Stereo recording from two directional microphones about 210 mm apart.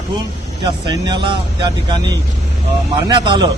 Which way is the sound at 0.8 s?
20° right (ahead or behind).